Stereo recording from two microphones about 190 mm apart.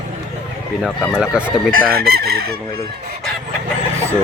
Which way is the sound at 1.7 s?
55° right (ahead or behind).